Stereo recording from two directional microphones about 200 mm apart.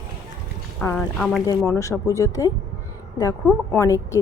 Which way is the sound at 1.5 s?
15° left (ahead or behind).